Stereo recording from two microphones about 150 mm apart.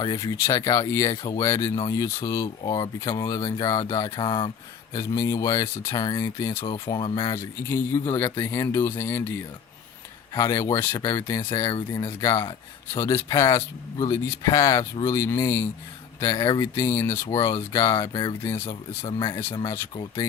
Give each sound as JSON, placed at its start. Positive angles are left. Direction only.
{"t": 0.0, "sound": "speech", "side_deg": 25}
{"t": 4.9, "sound": "speech", "side_deg": 20}
{"t": 6.6, "sound": "speech", "side_deg": 35}
{"t": 7.3, "sound": "speech", "side_deg": 15}
{"t": 10.3, "sound": "speech", "side_deg": 20}